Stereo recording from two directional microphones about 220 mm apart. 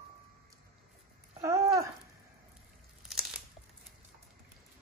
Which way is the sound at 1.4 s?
15° right (ahead or behind).